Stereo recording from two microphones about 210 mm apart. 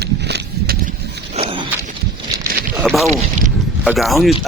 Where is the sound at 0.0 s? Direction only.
55° right (ahead or behind).